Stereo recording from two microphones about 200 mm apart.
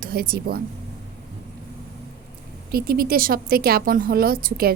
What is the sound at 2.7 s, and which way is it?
A woman's voice, 50° right (ahead or behind).